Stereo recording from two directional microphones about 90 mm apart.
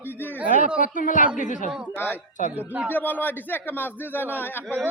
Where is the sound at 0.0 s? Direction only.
20° left (ahead or behind).